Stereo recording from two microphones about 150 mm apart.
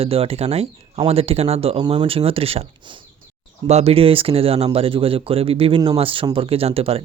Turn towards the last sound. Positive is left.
turn(degrees=-40)  # may be behind; listen again after turning